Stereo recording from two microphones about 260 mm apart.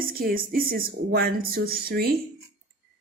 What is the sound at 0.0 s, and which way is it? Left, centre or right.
Speech, right.